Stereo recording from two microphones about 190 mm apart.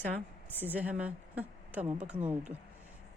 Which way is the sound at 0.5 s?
10° right (ahead or behind).